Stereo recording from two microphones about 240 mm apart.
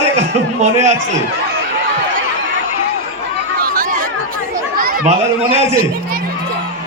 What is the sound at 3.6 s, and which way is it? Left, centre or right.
Chatter, right.